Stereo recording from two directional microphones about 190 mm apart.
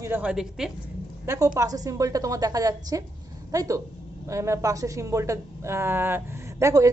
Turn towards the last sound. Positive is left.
turn(degrees=-15)  # may be behind; listen again after turning